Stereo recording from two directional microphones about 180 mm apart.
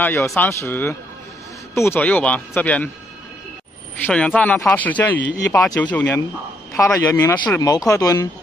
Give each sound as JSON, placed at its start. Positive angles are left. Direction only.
{"t": 0.0, "sound": "speech", "side_deg": 15}
{"t": 4.0, "sound": "speech", "side_deg": 5}